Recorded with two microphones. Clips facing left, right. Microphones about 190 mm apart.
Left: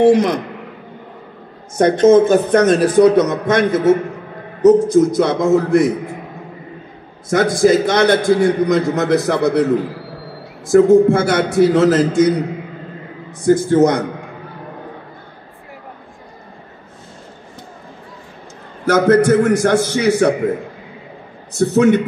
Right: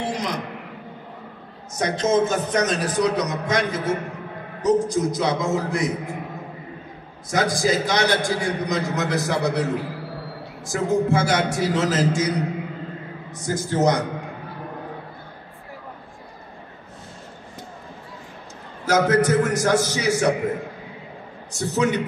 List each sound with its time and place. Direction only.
0.0 s a man's voice: 55° left (ahead or behind)
1.8 s a man's voice: 55° left (ahead or behind)
7.3 s a man's voice: 60° left (ahead or behind)
13.5 s a man's voice: 60° left (ahead or behind)
18.9 s a man's voice: 55° left (ahead or behind)
21.5 s a man's voice: 55° left (ahead or behind)